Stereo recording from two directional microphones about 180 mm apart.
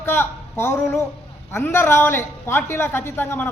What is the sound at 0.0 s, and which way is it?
A man's voice, 15° left (ahead or behind).